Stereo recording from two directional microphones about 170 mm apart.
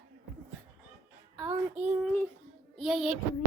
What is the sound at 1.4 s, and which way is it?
Speech, 10° right (ahead or behind).